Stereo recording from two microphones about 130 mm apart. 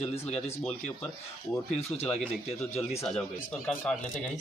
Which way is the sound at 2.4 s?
55° left (ahead or behind).